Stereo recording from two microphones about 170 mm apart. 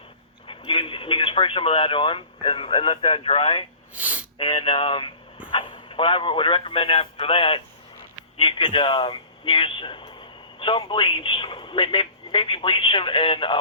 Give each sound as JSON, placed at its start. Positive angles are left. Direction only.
{"t": 0.4, "sound": "speech", "side_deg": 30}
{"t": 3.9, "sound": "a sound", "side_deg": -10}
{"t": 4.4, "sound": "speech", "side_deg": 30}